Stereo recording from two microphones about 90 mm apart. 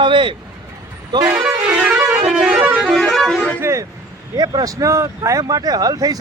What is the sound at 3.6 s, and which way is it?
Speech, 30° right (ahead or behind).